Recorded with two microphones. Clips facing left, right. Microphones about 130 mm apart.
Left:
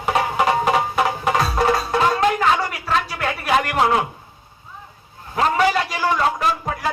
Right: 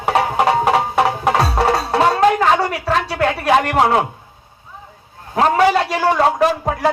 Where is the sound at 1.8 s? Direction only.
65° right (ahead or behind).